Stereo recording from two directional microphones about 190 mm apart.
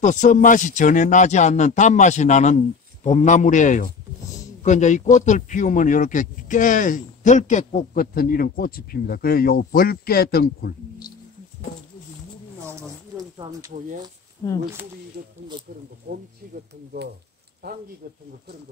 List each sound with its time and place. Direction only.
0.0 s a man's voice: 40° left (ahead or behind)
13.2 s speech: 20° right (ahead or behind)
15.2 s speech: 50° right (ahead or behind)
17.6 s speech: 55° right (ahead or behind)